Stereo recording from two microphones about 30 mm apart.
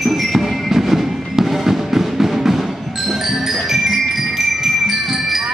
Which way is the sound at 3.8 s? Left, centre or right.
Centre.